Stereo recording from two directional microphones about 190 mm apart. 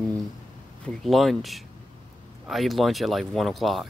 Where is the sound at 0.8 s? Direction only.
Centre (ahead or behind).